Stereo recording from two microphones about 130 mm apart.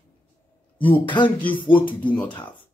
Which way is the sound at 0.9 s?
40° left (ahead or behind).